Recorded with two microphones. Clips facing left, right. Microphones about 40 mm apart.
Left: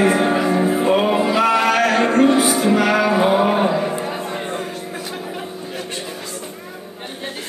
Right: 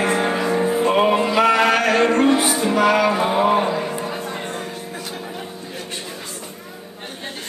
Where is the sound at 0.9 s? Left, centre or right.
Centre.